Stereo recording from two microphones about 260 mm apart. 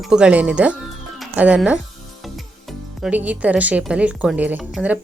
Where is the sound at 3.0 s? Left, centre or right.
Centre.